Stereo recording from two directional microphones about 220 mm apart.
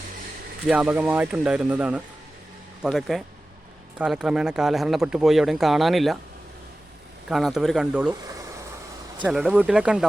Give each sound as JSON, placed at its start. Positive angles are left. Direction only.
{"t": 0.7, "sound": "speech", "side_deg": -5}
{"t": 7.3, "sound": "speech", "side_deg": 0}
{"t": 8.2, "sound": "a sound", "side_deg": -15}
{"t": 9.2, "sound": "speech", "side_deg": -5}